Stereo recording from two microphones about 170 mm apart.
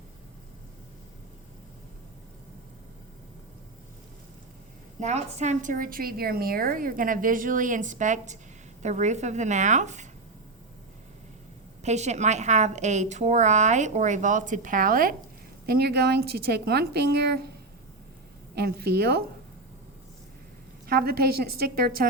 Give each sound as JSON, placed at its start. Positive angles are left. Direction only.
{"t": 4.9, "sound": "a woman's voice", "side_deg": -40}
{"t": 11.8, "sound": "a woman's voice", "side_deg": -40}
{"t": 15.6, "sound": "a woman's voice", "side_deg": -70}
{"t": 20.8, "sound": "a woman's voice", "side_deg": -65}